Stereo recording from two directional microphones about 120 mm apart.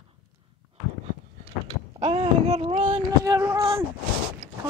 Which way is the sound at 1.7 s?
55° right (ahead or behind).